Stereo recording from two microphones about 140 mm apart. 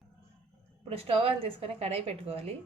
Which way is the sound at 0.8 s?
45° right (ahead or behind).